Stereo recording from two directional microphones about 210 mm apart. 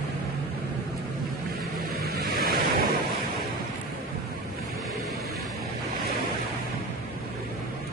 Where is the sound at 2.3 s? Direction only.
45° right (ahead or behind).